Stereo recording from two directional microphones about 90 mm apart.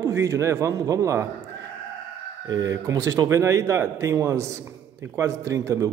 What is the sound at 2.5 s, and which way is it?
Speech, 40° right (ahead or behind).